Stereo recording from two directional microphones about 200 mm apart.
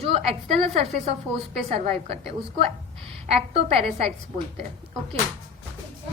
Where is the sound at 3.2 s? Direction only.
30° right (ahead or behind).